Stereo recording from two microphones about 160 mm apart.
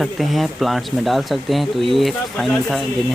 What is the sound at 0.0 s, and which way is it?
Speech, centre (ahead or behind).